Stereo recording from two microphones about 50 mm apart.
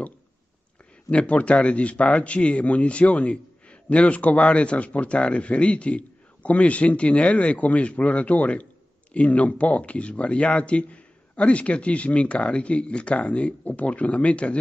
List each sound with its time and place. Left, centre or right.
1.1 s speech: left